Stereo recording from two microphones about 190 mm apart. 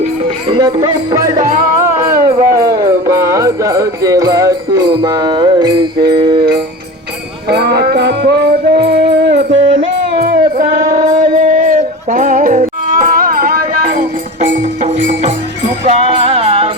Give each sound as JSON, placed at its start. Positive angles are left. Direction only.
{"t": 0.0, "sound": "music", "side_deg": -30}
{"t": 1.4, "sound": "music", "side_deg": -45}
{"t": 2.6, "sound": "music", "side_deg": -20}
{"t": 7.4, "sound": "music", "side_deg": -60}
{"t": 10.6, "sound": "music", "side_deg": -45}